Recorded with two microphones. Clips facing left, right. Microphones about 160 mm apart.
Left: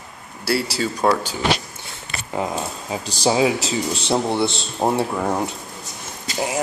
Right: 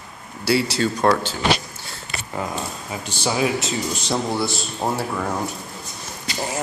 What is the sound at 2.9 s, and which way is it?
Speech, 35° left (ahead or behind).